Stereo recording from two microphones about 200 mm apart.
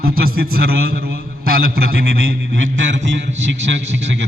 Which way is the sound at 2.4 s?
75° right (ahead or behind).